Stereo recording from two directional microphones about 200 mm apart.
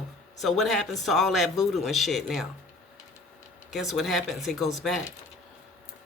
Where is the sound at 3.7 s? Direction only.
Centre (ahead or behind).